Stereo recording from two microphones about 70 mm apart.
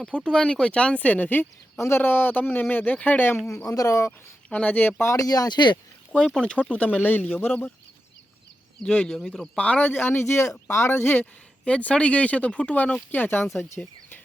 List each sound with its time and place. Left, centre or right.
0.3 s speech: centre
3.7 s speech: left
4.4 s speech: centre
5.0 s speech: left
6.4 s speech: centre
8.8 s speech: centre
9.1 s speech: centre
9.6 s speech: centre
9.9 s speech: left
11.6 s speech: centre